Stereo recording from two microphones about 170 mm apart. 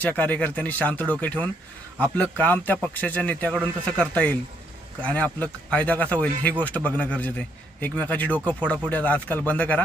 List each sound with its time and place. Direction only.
0.0 s a man's voice: 10° left (ahead or behind)